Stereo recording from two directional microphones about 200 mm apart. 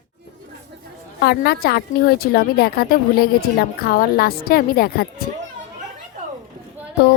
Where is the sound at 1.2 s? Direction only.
50° left (ahead or behind).